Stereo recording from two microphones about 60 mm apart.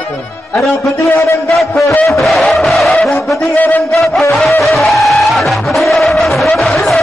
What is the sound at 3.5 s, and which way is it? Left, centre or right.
Speech, left.